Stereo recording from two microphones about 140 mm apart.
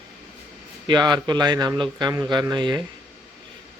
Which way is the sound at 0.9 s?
30° right (ahead or behind).